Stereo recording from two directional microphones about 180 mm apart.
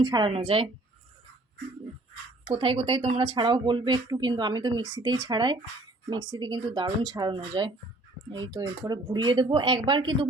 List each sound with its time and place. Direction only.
0.0 s a woman's voice: 25° right (ahead or behind)
2.5 s speech: 30° right (ahead or behind)